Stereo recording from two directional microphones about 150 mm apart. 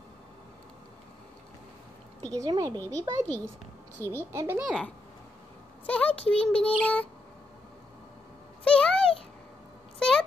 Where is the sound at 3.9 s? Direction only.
15° left (ahead or behind).